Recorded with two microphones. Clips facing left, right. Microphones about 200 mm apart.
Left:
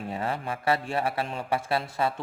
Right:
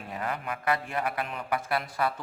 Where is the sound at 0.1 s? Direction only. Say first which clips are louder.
Left 1 dB; 30° left (ahead or behind).